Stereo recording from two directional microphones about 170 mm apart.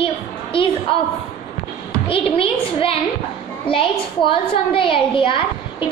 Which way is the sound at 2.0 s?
30° left (ahead or behind).